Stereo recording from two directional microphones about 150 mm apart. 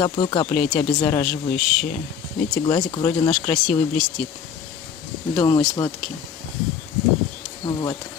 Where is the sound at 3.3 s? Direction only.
5° left (ahead or behind).